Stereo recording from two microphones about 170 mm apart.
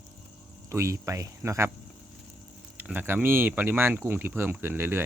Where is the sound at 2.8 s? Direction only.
10° right (ahead or behind).